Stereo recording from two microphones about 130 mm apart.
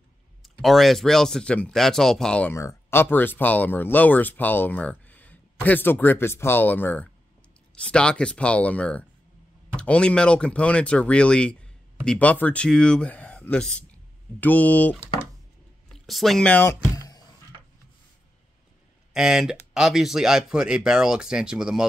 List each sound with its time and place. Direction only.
0.4 s speech: centre (ahead or behind)
2.5 s speech: 20° left (ahead or behind)
15.9 s speech: centre (ahead or behind)
16.9 s a sound: 30° left (ahead or behind)
19.1 s speech: 5° right (ahead or behind)